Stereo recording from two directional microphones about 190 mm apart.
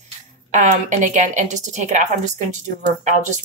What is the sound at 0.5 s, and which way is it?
A woman's voice, 40° right (ahead or behind).